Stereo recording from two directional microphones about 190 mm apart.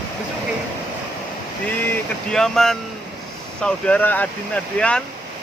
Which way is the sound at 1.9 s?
5° left (ahead or behind).